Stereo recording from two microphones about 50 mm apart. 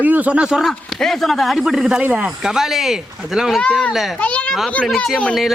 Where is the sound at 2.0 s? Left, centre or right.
Right.